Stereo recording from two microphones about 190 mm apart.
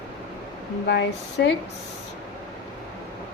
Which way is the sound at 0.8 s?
65° left (ahead or behind).